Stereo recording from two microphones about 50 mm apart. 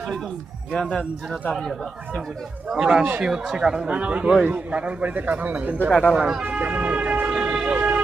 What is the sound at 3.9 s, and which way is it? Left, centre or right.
Speech, right.